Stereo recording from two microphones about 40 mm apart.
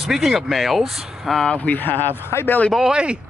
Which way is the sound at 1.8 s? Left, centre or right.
Left.